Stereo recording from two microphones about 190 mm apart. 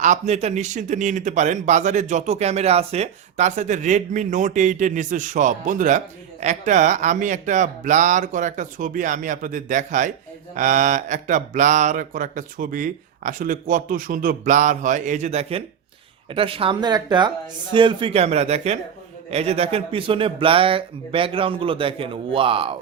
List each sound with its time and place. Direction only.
0.0 s a man's voice: 40° right (ahead or behind)